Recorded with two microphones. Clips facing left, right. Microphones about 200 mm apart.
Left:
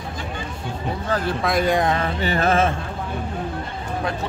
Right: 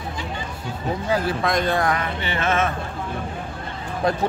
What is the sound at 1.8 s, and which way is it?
Speech, 25° left (ahead or behind).